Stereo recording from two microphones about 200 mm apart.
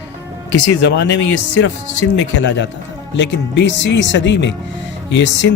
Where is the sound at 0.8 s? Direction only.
60° left (ahead or behind).